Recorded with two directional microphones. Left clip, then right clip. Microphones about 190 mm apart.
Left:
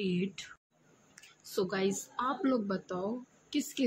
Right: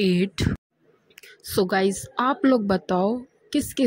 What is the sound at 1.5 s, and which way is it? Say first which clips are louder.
A woman's voice: right 11 dB; 35° right (ahead or behind).